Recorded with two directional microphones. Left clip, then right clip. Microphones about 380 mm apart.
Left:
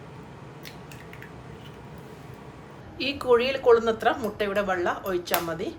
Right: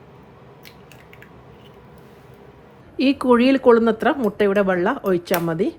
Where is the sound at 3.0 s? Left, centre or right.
Centre.